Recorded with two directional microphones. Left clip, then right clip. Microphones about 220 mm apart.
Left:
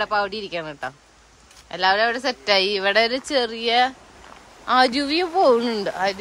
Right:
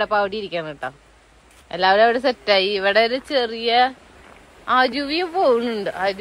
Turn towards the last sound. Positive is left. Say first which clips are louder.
# right 1 dB
turn(degrees=15)  # may be behind; listen again after turning